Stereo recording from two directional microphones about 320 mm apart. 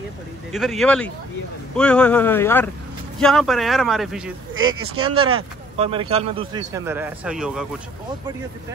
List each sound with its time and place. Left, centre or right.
0.5 s speech: centre
5.0 s a man's voice: centre